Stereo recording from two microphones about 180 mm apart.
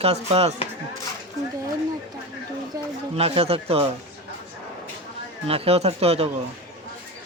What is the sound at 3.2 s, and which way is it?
Speech, 35° right (ahead or behind).